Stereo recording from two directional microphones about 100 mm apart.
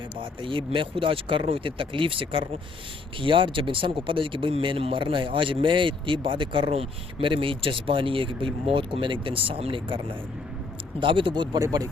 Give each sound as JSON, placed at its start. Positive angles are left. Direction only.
{"t": 0.2, "sound": "speech", "side_deg": -60}
{"t": 11.0, "sound": "speech", "side_deg": -60}
{"t": 11.6, "sound": "speech", "side_deg": -35}